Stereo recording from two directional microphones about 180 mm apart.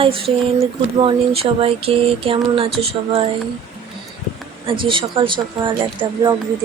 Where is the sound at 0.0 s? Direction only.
30° right (ahead or behind).